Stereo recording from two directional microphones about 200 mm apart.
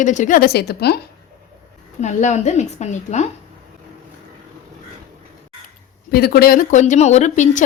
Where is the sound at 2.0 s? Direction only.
35° left (ahead or behind).